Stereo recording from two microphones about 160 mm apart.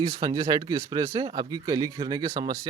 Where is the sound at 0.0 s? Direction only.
25° right (ahead or behind).